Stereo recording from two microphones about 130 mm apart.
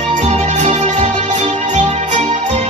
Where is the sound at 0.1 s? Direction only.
65° right (ahead or behind).